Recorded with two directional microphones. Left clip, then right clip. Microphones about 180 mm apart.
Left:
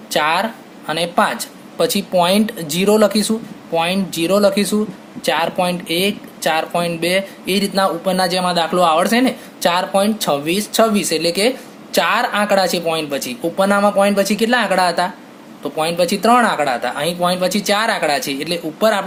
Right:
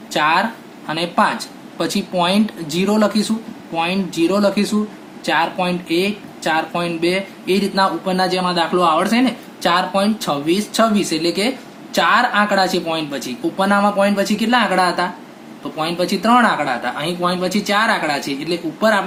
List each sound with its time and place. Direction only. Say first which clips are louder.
0.1 s speech: even; 50° left (ahead or behind)